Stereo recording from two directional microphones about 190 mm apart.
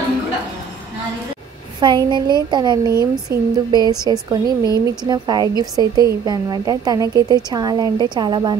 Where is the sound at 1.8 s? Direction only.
25° right (ahead or behind).